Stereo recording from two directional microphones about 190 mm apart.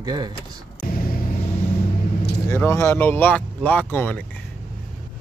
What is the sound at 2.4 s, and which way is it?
Speech, 15° left (ahead or behind).